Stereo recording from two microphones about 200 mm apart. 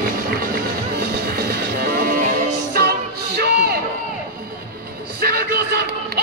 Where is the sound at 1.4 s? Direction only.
50° right (ahead or behind).